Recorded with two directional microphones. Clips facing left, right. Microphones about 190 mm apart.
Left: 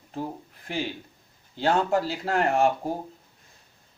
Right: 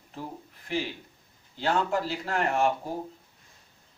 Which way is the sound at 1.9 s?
45° left (ahead or behind).